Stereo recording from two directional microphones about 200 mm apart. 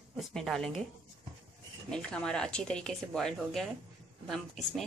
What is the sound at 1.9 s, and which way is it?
Speech, 5° left (ahead or behind).